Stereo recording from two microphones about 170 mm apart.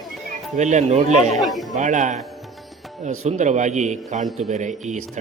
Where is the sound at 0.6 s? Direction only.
45° right (ahead or behind).